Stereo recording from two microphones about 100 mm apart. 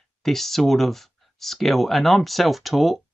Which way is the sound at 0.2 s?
Centre (ahead or behind).